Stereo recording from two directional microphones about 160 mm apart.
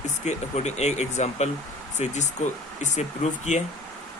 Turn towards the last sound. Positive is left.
turn(degrees=45)  # may be behind; listen again after turning